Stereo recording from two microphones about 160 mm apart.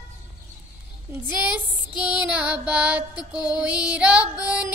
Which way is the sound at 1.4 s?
10° right (ahead or behind).